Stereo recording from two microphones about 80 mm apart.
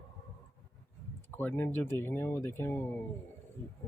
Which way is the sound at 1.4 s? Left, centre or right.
Left.